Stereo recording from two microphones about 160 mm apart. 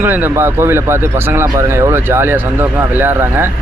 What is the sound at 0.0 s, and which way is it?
Speech, 15° right (ahead or behind).